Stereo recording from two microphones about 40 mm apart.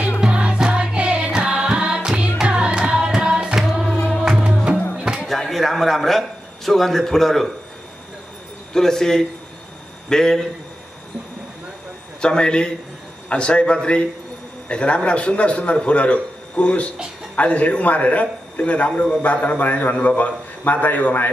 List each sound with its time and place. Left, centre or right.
0.2 s music: right
3.5 s music: centre
3.9 s music: centre
4.9 s music: centre
5.2 s a sound: centre
8.7 s a man's voice: centre
12.2 s a man's voice: left